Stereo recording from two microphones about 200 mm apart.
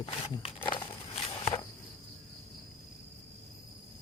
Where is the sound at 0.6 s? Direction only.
25° left (ahead or behind).